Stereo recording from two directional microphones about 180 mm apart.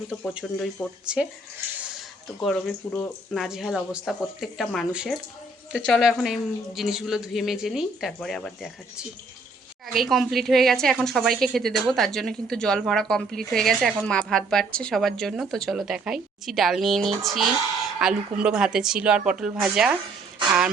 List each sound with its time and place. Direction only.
0.3 s speech: centre (ahead or behind)
2.8 s speech: 30° left (ahead or behind)
3.3 s speech: centre (ahead or behind)